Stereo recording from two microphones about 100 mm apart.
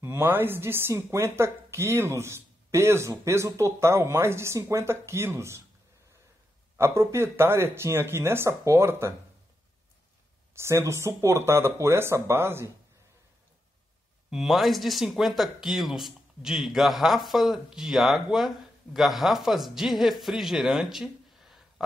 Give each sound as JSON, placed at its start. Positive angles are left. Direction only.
{"t": 0.0, "sound": "speech", "side_deg": -25}
{"t": 6.8, "sound": "speech", "side_deg": -25}
{"t": 10.5, "sound": "speech", "side_deg": -25}
{"t": 14.3, "sound": "speech", "side_deg": 0}